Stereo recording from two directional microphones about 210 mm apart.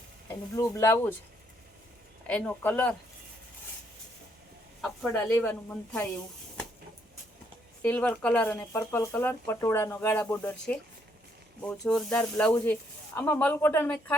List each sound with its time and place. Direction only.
0.3 s speech: 15° left (ahead or behind)
2.2 s speech: 5° left (ahead or behind)
4.8 s speech: 5° left (ahead or behind)
7.8 s speech: 5° left (ahead or behind)